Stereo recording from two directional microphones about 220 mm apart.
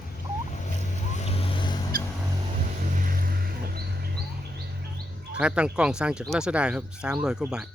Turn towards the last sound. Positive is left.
turn(degrees=-5)  # may be behind; listen again after turning